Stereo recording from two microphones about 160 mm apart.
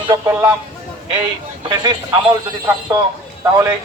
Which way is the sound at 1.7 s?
30° right (ahead or behind).